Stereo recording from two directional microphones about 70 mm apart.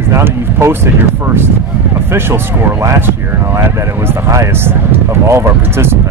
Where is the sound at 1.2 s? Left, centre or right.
Right.